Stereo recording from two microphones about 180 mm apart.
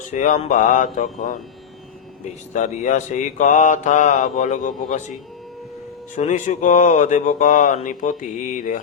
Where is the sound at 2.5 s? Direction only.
40° left (ahead or behind).